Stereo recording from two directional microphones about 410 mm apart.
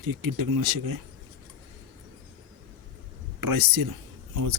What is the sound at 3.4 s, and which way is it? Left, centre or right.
Speech, right.